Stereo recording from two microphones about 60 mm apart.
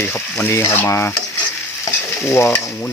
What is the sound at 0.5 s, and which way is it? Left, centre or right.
Stir, left.